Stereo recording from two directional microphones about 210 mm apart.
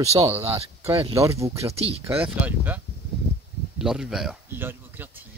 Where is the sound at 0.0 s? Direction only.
30° right (ahead or behind).